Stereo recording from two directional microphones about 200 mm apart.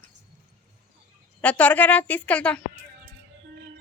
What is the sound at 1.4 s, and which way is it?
Speech, 5° left (ahead or behind).